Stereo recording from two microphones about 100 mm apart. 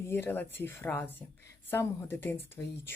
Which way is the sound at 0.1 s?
20° left (ahead or behind).